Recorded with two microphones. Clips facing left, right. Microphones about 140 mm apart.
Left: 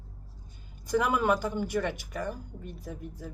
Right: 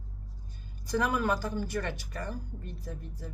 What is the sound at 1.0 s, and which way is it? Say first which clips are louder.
A woman's voice: left 2 dB; 20° left (ahead or behind).